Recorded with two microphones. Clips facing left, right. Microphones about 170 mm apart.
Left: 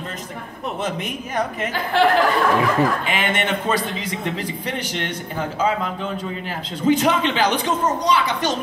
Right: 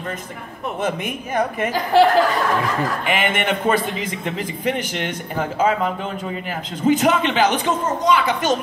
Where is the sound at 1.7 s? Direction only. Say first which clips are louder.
Right 5 dB; 40° right (ahead or behind).